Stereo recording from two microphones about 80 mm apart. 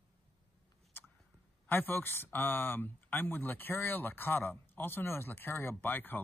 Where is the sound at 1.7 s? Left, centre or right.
Left.